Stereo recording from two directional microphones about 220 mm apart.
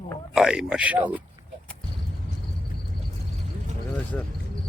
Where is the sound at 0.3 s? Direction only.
5° right (ahead or behind).